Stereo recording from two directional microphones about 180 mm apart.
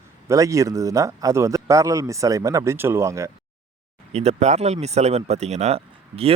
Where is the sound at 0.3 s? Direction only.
15° right (ahead or behind).